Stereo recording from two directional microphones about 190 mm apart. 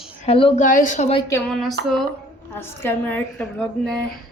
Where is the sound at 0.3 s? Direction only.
30° left (ahead or behind).